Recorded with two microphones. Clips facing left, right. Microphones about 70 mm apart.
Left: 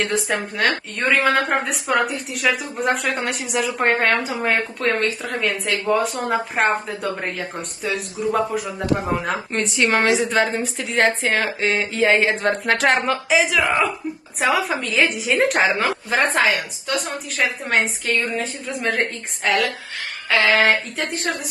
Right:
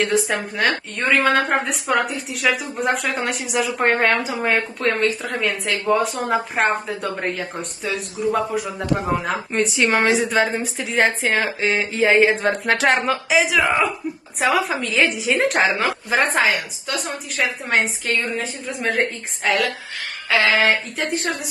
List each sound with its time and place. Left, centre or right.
0.0 s a woman's voice: centre
11.6 s a sound: centre
12.4 s a woman's voice: centre